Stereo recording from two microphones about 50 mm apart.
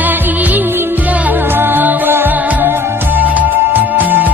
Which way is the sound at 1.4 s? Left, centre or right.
Right.